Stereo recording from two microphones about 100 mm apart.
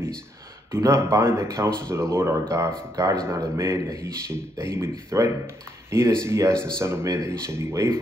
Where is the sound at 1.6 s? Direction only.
10° left (ahead or behind).